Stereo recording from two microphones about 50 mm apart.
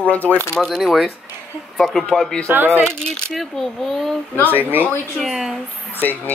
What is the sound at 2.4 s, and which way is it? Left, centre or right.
Speech, right.